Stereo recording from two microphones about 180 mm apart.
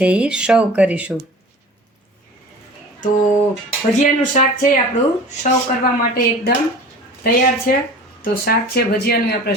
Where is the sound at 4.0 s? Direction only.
45° left (ahead or behind).